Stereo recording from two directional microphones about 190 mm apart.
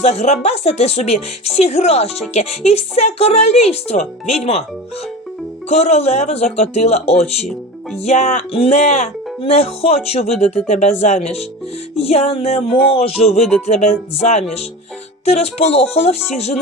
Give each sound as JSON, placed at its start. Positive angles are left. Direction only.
{"t": 0.0, "sound": "speech", "side_deg": 35}
{"t": 5.6, "sound": "speech", "side_deg": 35}